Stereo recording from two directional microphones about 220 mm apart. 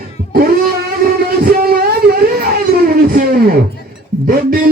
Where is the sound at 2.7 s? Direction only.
45° right (ahead or behind).